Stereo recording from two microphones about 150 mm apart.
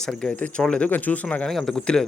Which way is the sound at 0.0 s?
5° left (ahead or behind).